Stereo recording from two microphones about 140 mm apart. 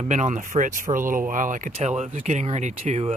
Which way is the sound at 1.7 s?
55° right (ahead or behind).